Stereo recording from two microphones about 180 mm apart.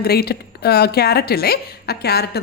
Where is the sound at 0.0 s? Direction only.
60° left (ahead or behind).